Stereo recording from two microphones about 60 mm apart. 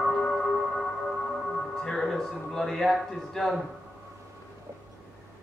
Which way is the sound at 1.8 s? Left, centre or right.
Centre.